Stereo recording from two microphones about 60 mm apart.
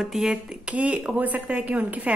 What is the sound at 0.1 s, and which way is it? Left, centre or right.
Speech, centre.